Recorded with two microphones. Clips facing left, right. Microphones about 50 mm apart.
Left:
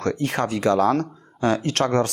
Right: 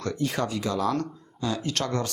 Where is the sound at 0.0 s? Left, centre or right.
Left.